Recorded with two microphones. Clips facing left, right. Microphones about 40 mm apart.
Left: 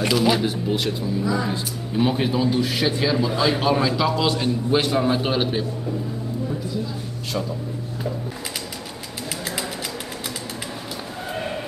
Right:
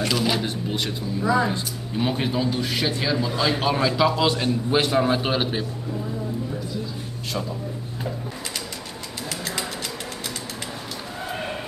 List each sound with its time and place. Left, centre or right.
0.1 s a man's voice: centre
1.2 s speech: right
1.5 s a man's voice: centre